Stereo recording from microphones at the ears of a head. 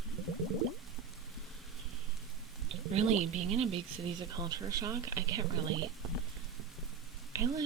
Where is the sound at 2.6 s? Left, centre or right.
Right.